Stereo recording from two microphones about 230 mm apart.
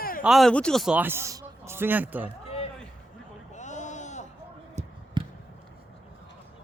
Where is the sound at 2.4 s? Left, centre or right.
Left.